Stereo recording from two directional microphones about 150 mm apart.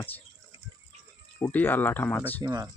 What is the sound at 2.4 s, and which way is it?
Speech, 25° right (ahead or behind).